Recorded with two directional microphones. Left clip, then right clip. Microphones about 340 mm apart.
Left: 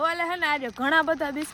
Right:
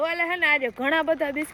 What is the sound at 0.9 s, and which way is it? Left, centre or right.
Speech, left.